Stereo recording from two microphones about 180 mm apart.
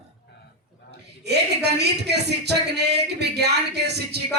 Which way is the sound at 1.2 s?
70° right (ahead or behind).